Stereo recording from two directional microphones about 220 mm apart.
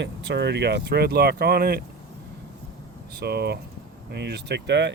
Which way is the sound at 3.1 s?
45° right (ahead or behind).